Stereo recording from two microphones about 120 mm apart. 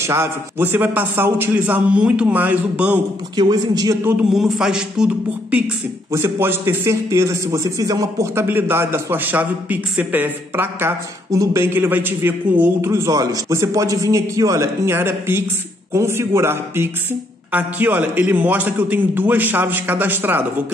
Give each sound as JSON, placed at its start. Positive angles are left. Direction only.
{"t": 0.0, "sound": "a man's voice", "side_deg": -20}
{"t": 3.3, "sound": "a man's voice", "side_deg": -35}
{"t": 4.0, "sound": "a man's voice", "side_deg": -5}
{"t": 6.1, "sound": "a man's voice", "side_deg": -20}
{"t": 8.5, "sound": "a man's voice", "side_deg": -20}